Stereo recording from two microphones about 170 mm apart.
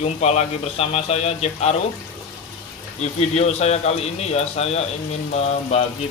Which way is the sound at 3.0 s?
40° left (ahead or behind).